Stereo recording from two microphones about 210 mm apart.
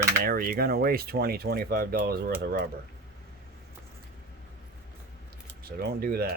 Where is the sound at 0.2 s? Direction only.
45° right (ahead or behind).